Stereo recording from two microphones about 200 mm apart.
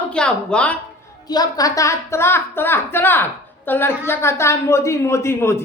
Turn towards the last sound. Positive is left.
turn(degrees=15)  # may be behind; listen again after turning